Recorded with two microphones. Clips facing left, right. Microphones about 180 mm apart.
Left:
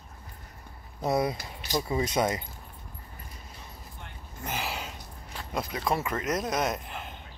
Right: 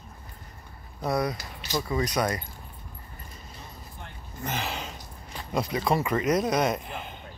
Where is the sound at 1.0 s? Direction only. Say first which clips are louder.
Left 1 dB; 25° left (ahead or behind).